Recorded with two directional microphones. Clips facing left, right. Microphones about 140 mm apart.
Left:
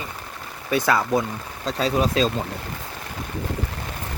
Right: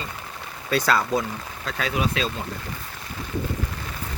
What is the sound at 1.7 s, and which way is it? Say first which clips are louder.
Speech: left 4 dB; 35° left (ahead or behind).